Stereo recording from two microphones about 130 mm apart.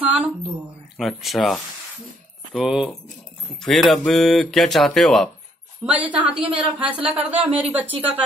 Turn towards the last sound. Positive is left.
turn(degrees=-15)  # may be behind; listen again after turning